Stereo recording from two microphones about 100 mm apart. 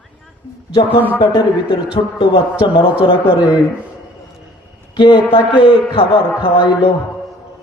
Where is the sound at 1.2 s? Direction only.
45° left (ahead or behind).